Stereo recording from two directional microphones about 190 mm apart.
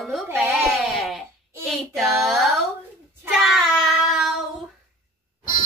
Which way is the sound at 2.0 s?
Centre (ahead or behind).